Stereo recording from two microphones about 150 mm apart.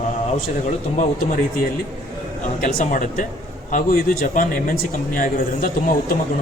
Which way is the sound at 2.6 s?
60° left (ahead or behind).